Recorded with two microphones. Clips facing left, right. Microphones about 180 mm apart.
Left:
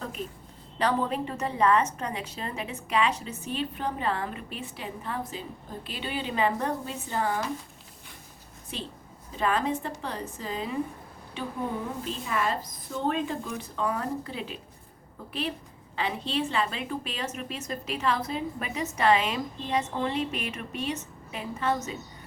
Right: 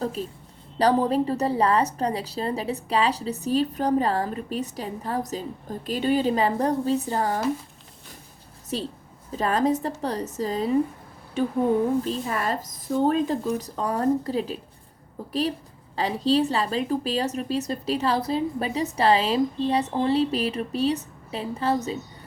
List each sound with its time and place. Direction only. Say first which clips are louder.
0.2 s a woman's voice: right 4 dB; 30° right (ahead or behind)
8.7 s a woman's voice: right 8 dB; 40° right (ahead or behind)